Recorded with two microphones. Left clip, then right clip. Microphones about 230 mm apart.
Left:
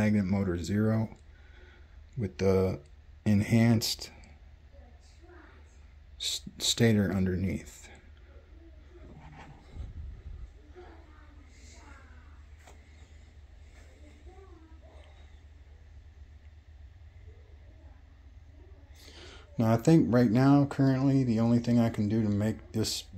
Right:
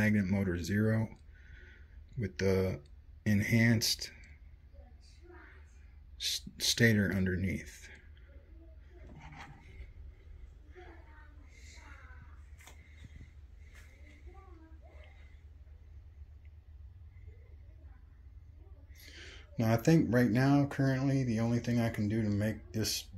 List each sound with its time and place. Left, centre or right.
0.0 s speech: centre
2.1 s speech: centre
6.1 s speech: centre
18.9 s a sound: centre
20.3 s speech: centre